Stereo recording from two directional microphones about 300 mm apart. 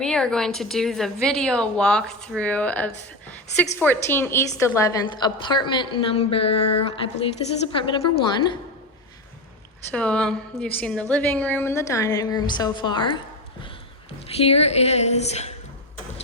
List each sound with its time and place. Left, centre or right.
0.0 s a woman's voice: centre
9.9 s a woman's voice: centre
14.3 s a woman's voice: centre